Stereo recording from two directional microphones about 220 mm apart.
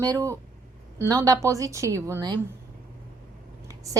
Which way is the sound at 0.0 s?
15° right (ahead or behind).